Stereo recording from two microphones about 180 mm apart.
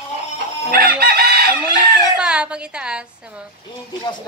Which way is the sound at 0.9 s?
60° right (ahead or behind).